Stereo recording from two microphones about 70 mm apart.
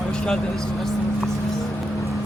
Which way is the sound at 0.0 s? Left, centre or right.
Centre.